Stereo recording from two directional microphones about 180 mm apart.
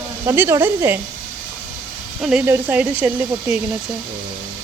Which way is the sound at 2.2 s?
5° right (ahead or behind).